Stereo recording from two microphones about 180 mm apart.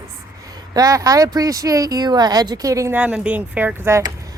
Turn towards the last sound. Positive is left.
turn(degrees=-15)  # may be behind; listen again after turning